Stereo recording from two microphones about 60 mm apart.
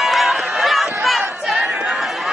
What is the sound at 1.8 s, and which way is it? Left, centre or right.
Chatter, centre.